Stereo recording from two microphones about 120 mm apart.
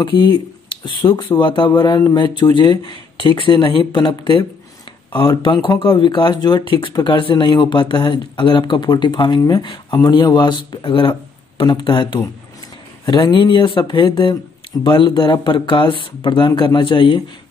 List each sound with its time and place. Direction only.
0.0 s speech: 40° left (ahead or behind)
2.0 s speech: 30° left (ahead or behind)
2.5 s speech: 40° left (ahead or behind)